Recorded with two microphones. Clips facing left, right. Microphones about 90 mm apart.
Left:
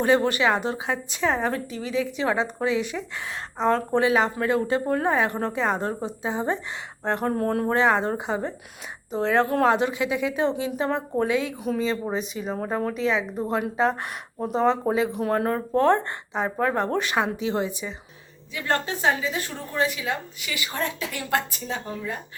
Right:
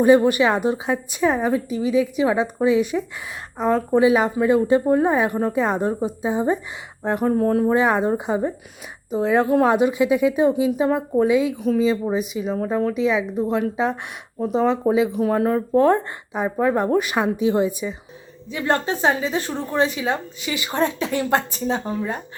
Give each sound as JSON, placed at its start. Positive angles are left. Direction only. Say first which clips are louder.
{"t": 0.0, "sound": "a woman's voice", "louder": "right 6 dB", "side_deg": -15}
{"t": 3.6, "sound": "a woman's voice", "louder": "right 4 dB", "side_deg": -5}
{"t": 8.0, "sound": "a woman's voice", "louder": "right 5 dB", "side_deg": -15}
{"t": 10.5, "sound": "a woman's voice", "louder": "right 6 dB", "side_deg": -5}
{"t": 11.5, "sound": "a woman's voice", "louder": "right 6 dB", "side_deg": 0}
{"t": 12.5, "sound": "speech", "louder": "right 5 dB", "side_deg": 5}
{"t": 12.9, "sound": "a woman's voice", "louder": "right 4 dB", "side_deg": -5}